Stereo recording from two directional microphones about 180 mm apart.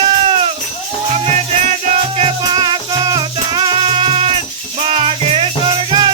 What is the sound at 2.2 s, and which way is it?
Music, 30° right (ahead or behind).